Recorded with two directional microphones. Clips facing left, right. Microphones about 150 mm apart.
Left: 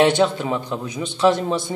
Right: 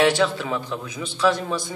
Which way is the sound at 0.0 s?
25° left (ahead or behind).